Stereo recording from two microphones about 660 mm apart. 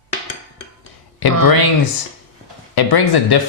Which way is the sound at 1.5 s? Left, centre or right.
Left.